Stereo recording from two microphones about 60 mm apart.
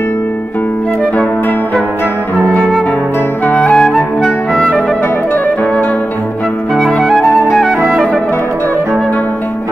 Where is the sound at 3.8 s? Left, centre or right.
Centre.